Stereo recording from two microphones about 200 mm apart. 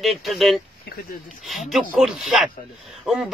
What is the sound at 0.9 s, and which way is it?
Speech, 55° left (ahead or behind).